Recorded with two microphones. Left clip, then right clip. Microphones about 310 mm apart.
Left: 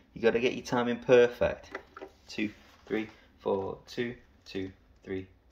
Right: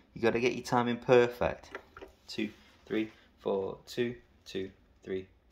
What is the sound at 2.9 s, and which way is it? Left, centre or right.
Speech, centre.